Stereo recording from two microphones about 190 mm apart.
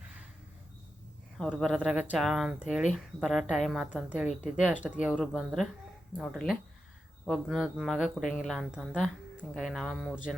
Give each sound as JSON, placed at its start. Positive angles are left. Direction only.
{"t": 1.4, "sound": "speech", "side_deg": 5}
{"t": 8.2, "sound": "speech", "side_deg": 45}
{"t": 8.4, "sound": "speech", "side_deg": 0}